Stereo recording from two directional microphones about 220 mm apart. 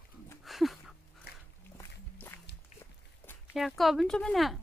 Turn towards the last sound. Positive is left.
turn(degrees=0)  # may be behind; listen again after turning